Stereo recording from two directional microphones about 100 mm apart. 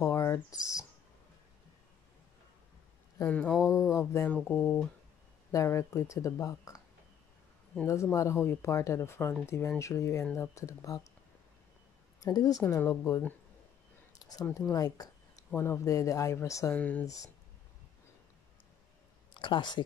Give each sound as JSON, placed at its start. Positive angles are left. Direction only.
{"t": 0.0, "sound": "a sound", "side_deg": 30}
{"t": 3.3, "sound": "speech", "side_deg": 15}
{"t": 3.9, "sound": "speech", "side_deg": 25}
{"t": 7.8, "sound": "speech", "side_deg": 30}
{"t": 12.2, "sound": "speech", "side_deg": 40}
{"t": 14.7, "sound": "a sound", "side_deg": 40}
{"t": 15.5, "sound": "speech", "side_deg": 25}
{"t": 16.7, "sound": "speech", "side_deg": 15}
{"t": 17.0, "sound": "speech", "side_deg": 35}
{"t": 19.3, "sound": "speech", "side_deg": 55}